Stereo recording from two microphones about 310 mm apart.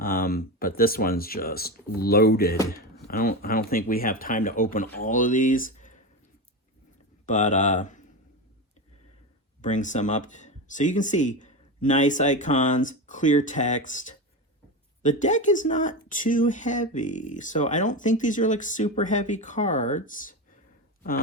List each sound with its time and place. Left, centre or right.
0.0 s speech: left
7.3 s speech: left
9.6 s speech: left